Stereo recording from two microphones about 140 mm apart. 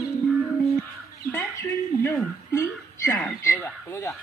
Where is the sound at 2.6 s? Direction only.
15° left (ahead or behind).